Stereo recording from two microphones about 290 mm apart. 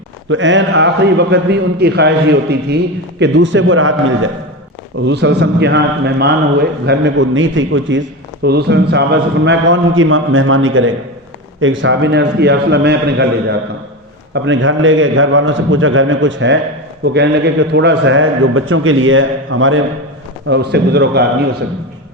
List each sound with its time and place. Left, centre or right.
0.3 s a man's voice: right